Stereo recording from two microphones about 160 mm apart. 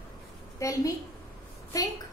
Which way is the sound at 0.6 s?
20° left (ahead or behind).